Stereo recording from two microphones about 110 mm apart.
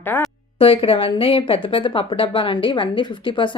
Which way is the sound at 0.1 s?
15° left (ahead or behind).